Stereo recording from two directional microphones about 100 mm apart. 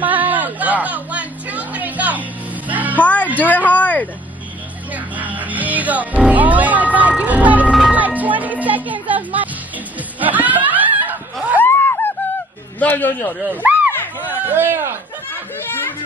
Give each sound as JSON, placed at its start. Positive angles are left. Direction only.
{"t": 0.0, "sound": "music", "side_deg": -15}
{"t": 3.0, "sound": "music", "side_deg": 15}
{"t": 3.3, "sound": "a sound", "side_deg": 15}
{"t": 4.9, "sound": "music", "side_deg": -15}
{"t": 10.2, "sound": "snicker", "side_deg": -15}
{"t": 11.6, "sound": "snicker", "side_deg": 20}
{"t": 12.7, "sound": "a man's voice", "side_deg": 20}
{"t": 13.5, "sound": "a sound", "side_deg": -15}
{"t": 13.9, "sound": "a sound", "side_deg": 20}
{"t": 14.5, "sound": "a man's voice", "side_deg": -20}